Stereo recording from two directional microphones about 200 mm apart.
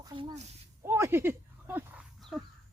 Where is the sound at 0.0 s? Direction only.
20° right (ahead or behind).